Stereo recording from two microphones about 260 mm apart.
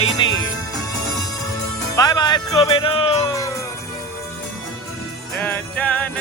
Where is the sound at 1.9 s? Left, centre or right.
Centre.